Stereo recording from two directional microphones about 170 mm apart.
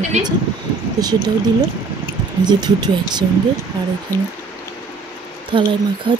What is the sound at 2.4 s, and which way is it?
Speech, 25° right (ahead or behind).